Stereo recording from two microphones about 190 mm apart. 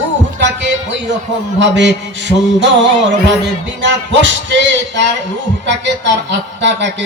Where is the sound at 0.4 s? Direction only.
70° right (ahead or behind).